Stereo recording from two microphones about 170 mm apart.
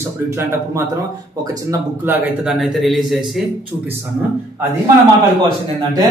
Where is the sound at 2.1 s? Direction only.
5° right (ahead or behind).